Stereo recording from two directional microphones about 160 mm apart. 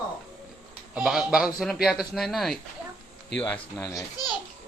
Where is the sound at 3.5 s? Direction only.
15° left (ahead or behind).